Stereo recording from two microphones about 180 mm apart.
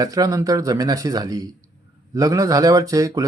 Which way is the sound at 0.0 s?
20° right (ahead or behind).